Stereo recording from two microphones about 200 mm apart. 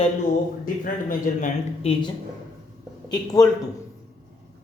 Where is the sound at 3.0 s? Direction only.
20° left (ahead or behind).